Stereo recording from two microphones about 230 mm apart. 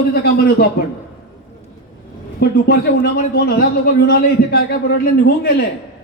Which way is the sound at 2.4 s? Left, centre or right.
Left.